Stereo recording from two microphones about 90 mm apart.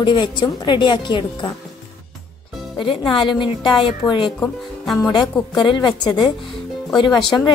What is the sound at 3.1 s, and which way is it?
A woman's voice, 65° left (ahead or behind).